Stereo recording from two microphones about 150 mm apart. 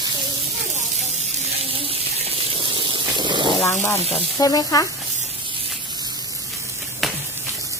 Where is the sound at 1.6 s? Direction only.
40° right (ahead or behind).